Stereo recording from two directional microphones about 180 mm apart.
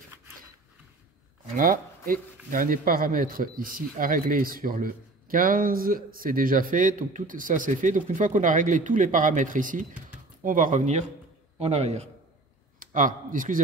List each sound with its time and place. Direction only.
1.6 s a man's voice: 50° right (ahead or behind)
12.7 s speech: 50° right (ahead or behind)